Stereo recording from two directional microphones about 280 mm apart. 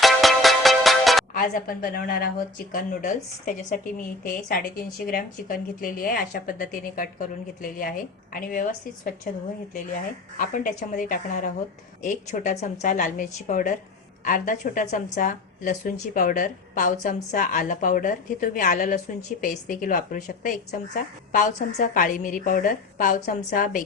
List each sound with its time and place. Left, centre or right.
0.0 s music: centre
1.3 s a woman's voice: left